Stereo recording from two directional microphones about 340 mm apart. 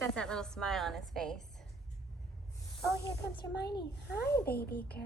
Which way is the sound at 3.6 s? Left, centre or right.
Left.